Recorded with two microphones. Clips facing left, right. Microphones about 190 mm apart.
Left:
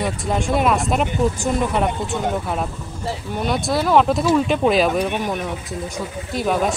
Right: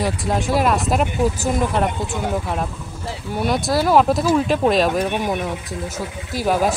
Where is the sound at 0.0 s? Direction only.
Centre (ahead or behind).